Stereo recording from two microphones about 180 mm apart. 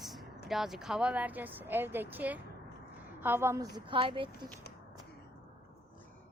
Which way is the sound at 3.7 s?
30° right (ahead or behind).